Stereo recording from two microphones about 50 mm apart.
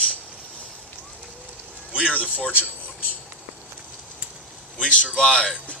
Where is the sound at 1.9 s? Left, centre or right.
Right.